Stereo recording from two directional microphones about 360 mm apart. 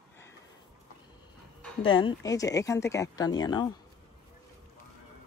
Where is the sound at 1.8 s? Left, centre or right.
Centre.